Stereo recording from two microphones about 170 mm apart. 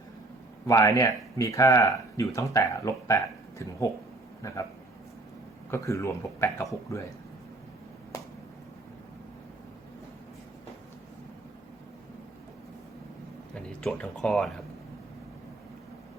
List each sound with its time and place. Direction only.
0.7 s speech: 20° left (ahead or behind)
5.7 s speech: 15° left (ahead or behind)
8.1 s a sound: 20° left (ahead or behind)
13.5 s speech: 5° left (ahead or behind)